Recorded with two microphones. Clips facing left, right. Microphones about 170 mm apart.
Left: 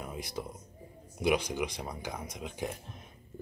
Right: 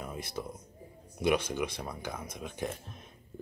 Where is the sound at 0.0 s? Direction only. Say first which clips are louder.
Even; 15° left (ahead or behind).